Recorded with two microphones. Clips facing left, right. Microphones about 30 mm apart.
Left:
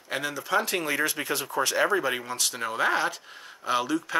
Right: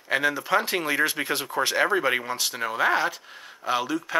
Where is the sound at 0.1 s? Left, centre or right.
Centre.